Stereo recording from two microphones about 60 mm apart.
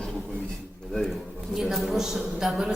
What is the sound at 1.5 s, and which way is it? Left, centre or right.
A woman's voice, centre.